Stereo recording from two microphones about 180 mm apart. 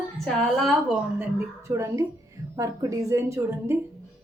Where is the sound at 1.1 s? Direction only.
15° right (ahead or behind).